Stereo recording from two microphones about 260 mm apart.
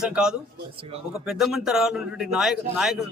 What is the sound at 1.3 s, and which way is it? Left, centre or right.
Speech, centre.